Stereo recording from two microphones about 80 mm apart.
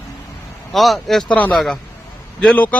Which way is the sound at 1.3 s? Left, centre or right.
Centre.